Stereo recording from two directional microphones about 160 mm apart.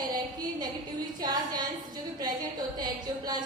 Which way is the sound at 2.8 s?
25° right (ahead or behind).